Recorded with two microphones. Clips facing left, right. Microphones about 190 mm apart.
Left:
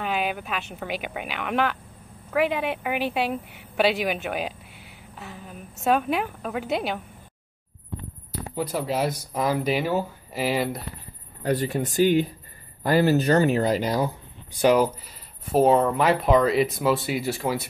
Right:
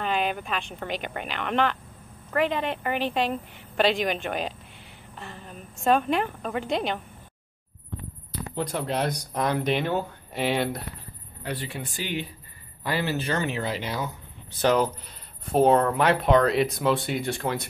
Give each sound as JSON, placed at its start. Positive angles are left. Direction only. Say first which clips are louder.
{"t": 0.0, "sound": "a woman's voice", "louder": "even", "side_deg": 5}
{"t": 5.1, "sound": "a sound", "louder": "left 1 dB", "side_deg": 5}
{"t": 5.9, "sound": "a woman's voice", "louder": "even", "side_deg": 5}
{"t": 8.3, "sound": "speech", "louder": "left 1 dB", "side_deg": 5}
{"t": 11.4, "sound": "speech", "louder": "left 9 dB", "side_deg": 40}
{"t": 14.5, "sound": "speech", "louder": "left 3 dB", "side_deg": 10}